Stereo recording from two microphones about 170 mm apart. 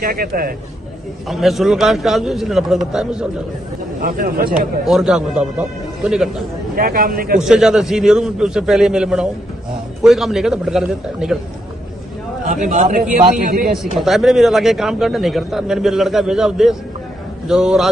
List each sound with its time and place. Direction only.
0.0 s speech: 60° right (ahead or behind)
1.3 s a man's voice: centre (ahead or behind)
4.0 s speech: 60° right (ahead or behind)
4.8 s a man's voice: centre (ahead or behind)
6.7 s speech: 60° right (ahead or behind)
7.3 s a man's voice: centre (ahead or behind)
12.4 s a man's voice: 50° right (ahead or behind)
13.9 s a man's voice: centre (ahead or behind)